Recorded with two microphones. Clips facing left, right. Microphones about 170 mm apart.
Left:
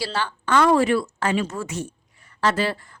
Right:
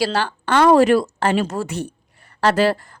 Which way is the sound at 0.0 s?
85° right.